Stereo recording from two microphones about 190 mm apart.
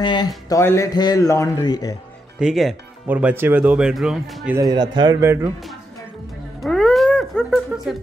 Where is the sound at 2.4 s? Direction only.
5° right (ahead or behind).